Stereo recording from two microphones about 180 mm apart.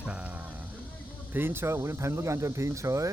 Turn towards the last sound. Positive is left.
turn(degrees=-15)  # may be behind; listen again after turning